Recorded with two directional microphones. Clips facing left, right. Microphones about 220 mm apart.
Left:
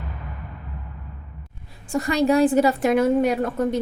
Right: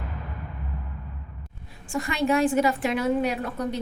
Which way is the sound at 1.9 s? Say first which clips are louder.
Left 5 dB; 40° left (ahead or behind).